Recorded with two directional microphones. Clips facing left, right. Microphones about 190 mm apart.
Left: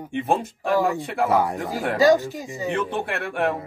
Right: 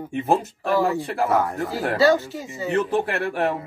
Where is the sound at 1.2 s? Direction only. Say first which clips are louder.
Left 2 dB; 15° left (ahead or behind).